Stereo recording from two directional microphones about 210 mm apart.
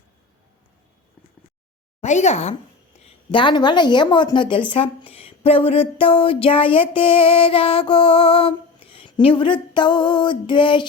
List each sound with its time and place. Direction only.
2.0 s speech: 35° left (ahead or behind)
3.2 s a woman's voice: 20° left (ahead or behind)